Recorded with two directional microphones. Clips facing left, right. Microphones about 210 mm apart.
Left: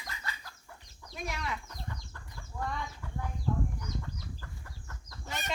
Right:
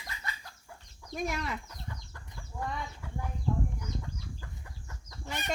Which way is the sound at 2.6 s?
25° right (ahead or behind).